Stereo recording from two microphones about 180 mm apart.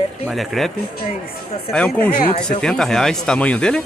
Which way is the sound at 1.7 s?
10° left (ahead or behind).